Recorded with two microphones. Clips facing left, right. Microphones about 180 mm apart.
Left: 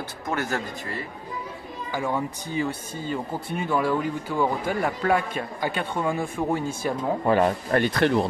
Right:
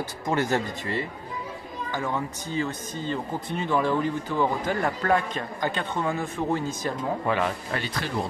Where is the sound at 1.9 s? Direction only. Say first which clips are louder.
Left 3 dB; 10° left (ahead or behind).